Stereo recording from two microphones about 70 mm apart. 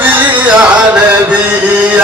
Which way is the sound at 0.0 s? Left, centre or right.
Right.